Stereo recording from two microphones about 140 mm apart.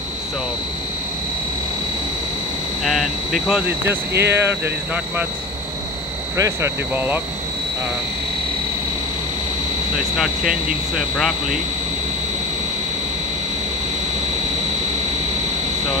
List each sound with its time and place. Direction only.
2.8 s speech: centre (ahead or behind)
6.3 s speech: 20° right (ahead or behind)
9.9 s speech: 5° right (ahead or behind)